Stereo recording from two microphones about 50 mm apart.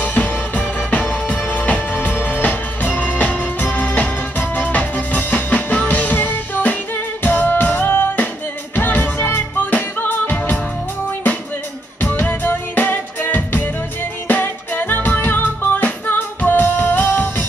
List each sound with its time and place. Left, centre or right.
0.0 s music: left
12.0 s music: left